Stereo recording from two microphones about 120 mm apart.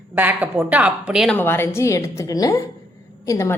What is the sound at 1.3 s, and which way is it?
A woman's voice, 15° left (ahead or behind).